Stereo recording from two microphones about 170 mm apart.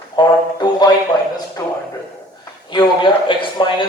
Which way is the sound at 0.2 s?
25° left (ahead or behind).